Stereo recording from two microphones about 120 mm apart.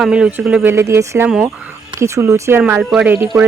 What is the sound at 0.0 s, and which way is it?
Speech, 10° right (ahead or behind).